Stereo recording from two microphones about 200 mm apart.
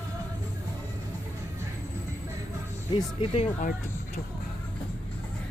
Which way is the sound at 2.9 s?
25° left (ahead or behind).